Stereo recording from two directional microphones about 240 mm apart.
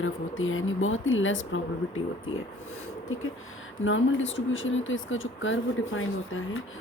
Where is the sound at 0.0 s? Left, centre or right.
Left.